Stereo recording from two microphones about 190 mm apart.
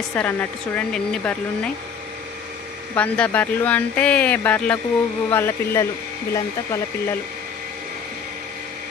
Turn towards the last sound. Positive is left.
turn(degrees=15)  # may be behind; listen again after turning